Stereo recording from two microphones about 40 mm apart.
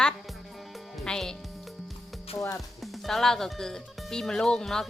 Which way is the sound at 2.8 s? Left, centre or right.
Centre.